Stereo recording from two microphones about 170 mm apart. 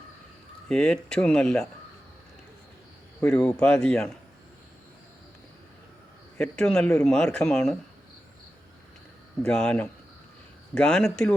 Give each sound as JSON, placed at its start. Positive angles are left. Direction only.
{"t": 0.7, "sound": "a man's voice", "side_deg": 5}
{"t": 3.2, "sound": "a man's voice", "side_deg": 5}
{"t": 6.3, "sound": "a man's voice", "side_deg": 5}
{"t": 9.4, "sound": "a man's voice", "side_deg": 5}